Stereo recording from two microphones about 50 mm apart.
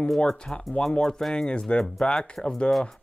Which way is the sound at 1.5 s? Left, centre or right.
Left.